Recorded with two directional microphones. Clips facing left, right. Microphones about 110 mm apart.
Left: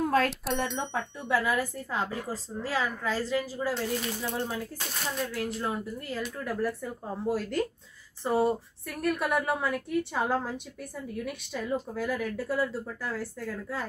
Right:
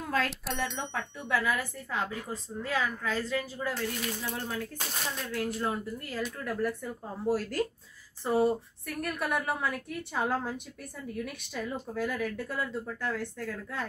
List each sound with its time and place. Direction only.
0.0 s bicycle bell: 45° left (ahead or behind)
0.3 s speech: centre (ahead or behind)
1.3 s a woman's voice: 35° left (ahead or behind)
5.1 s speech: centre (ahead or behind)